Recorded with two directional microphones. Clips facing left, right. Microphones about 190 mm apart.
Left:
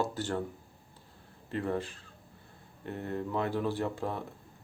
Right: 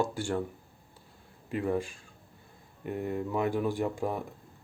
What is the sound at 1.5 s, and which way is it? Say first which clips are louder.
Speech: right 3 dB; 10° right (ahead or behind).